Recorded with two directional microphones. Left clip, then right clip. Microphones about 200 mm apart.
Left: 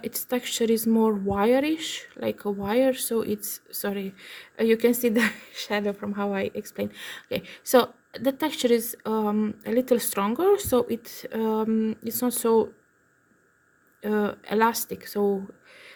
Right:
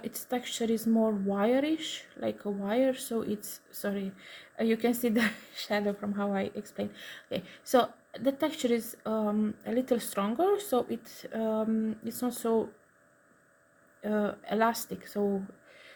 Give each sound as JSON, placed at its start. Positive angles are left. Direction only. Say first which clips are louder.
{"t": 0.0, "sound": "speech", "louder": "left 6 dB", "side_deg": 50}
{"t": 14.0, "sound": "speech", "louder": "left 5 dB", "side_deg": 50}